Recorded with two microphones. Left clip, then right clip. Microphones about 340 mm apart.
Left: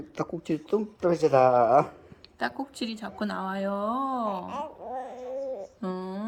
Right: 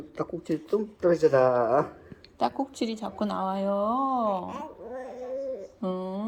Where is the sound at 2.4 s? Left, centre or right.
Centre.